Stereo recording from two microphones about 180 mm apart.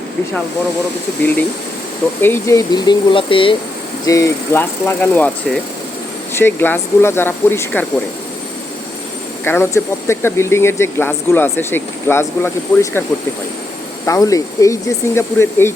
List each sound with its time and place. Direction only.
2.2 s speech: 15° left (ahead or behind)
4.0 s speech: 20° left (ahead or behind)
9.4 s speech: 10° left (ahead or behind)